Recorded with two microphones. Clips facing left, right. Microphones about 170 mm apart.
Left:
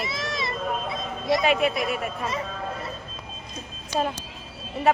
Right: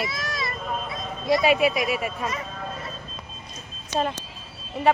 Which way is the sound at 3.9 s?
5° left (ahead or behind).